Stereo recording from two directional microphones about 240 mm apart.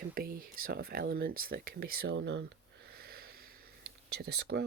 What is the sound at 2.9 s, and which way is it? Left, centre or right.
Wheeze, right.